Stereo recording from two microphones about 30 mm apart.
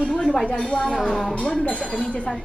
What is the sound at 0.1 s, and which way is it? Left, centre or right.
Speech, centre.